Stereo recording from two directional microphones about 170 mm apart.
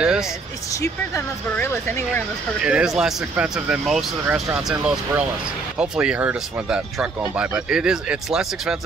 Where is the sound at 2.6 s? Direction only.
5° right (ahead or behind).